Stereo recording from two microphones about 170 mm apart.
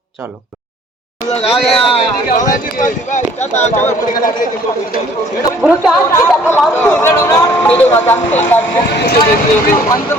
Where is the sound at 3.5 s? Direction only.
15° left (ahead or behind).